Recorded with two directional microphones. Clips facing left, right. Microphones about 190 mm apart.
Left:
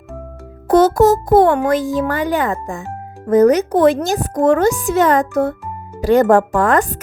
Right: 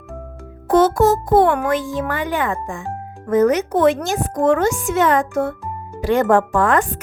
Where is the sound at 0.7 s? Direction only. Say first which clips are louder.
Left 3 dB; 40° left (ahead or behind).